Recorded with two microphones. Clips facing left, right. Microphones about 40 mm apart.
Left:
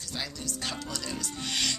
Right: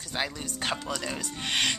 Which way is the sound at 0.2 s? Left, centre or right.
Right.